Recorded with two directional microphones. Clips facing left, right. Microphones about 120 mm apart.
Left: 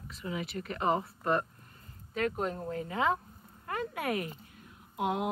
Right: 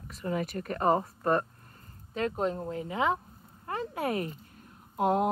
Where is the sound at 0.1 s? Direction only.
45° right (ahead or behind).